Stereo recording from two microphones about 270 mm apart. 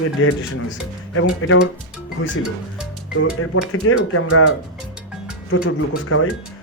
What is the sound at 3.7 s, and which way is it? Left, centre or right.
Speech, left.